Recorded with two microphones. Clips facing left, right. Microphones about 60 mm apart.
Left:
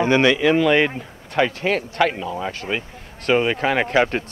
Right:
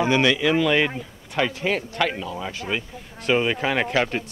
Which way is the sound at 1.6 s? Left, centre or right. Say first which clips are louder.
Left 4 dB; left.